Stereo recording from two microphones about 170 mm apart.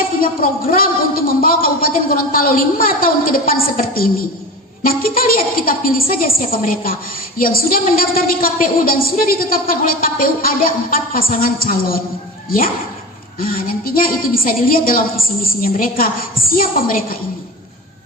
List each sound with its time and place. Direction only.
0.7 s a woman's voice: 60° left (ahead or behind)